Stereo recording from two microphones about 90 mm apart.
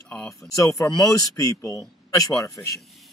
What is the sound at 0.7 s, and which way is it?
Speech, 40° left (ahead or behind).